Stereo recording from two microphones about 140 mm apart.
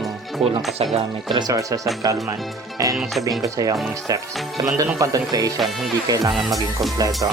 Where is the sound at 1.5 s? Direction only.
25° right (ahead or behind).